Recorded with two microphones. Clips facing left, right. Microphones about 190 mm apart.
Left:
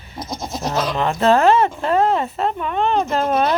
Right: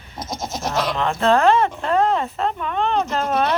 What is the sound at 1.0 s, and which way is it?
Speech, 5° left (ahead or behind).